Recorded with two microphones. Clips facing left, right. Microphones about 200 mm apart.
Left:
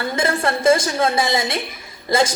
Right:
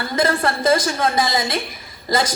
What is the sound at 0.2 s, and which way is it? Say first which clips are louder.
Speech: right 2 dB; 25° left (ahead or behind).